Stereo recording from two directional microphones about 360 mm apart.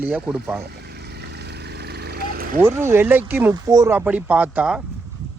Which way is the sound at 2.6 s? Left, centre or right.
Centre.